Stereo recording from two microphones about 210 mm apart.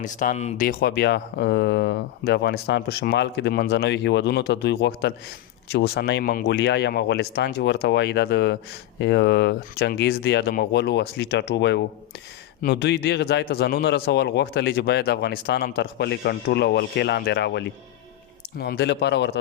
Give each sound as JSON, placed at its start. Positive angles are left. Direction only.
{"t": 0.0, "sound": "speech", "side_deg": 35}